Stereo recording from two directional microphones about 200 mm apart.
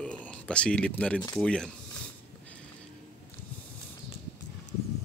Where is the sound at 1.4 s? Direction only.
5° left (ahead or behind).